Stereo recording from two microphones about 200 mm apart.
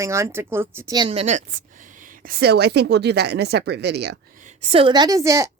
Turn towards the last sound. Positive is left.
turn(degrees=-15)  # may be behind; listen again after turning